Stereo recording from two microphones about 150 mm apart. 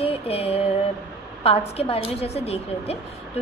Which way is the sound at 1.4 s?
40° left (ahead or behind).